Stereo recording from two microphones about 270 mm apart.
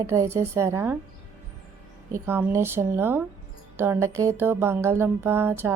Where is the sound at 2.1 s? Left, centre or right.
Centre.